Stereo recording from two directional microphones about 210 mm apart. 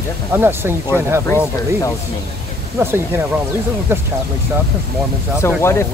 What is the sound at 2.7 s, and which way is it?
Speech, 10° right (ahead or behind).